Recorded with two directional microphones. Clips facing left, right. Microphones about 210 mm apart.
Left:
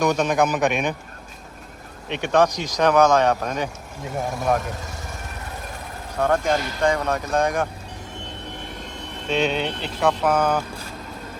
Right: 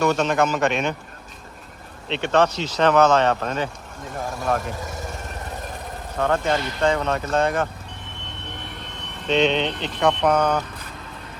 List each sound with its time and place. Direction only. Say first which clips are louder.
0.0 s speech: even; 15° left (ahead or behind)
2.0 s speech: even; 10° left (ahead or behind)
6.1 s speech: left 1 dB; 10° left (ahead or behind)
9.2 s speech: right 3 dB; 10° left (ahead or behind)